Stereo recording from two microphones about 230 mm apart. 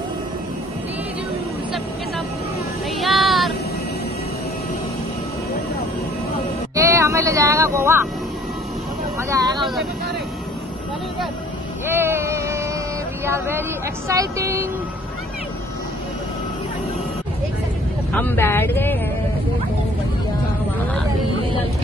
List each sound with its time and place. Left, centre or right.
3.0 s a sound: centre
6.7 s speech: centre
9.3 s speech: centre
11.9 s vehicle: centre
13.2 s speech: centre
18.1 s speech: centre